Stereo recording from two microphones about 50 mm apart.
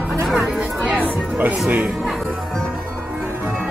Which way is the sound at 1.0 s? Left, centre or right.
Right.